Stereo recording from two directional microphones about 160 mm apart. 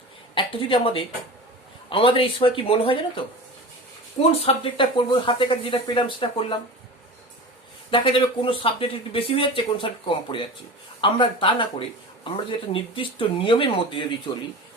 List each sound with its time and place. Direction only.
0.3 s speech: 35° left (ahead or behind)
4.2 s speech: 35° left (ahead or behind)
7.9 s speech: 30° left (ahead or behind)